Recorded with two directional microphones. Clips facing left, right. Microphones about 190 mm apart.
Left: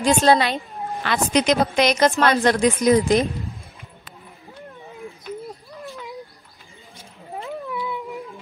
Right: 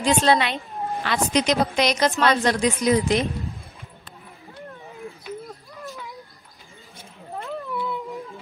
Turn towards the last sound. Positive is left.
turn(degrees=0)  # may be behind; listen again after turning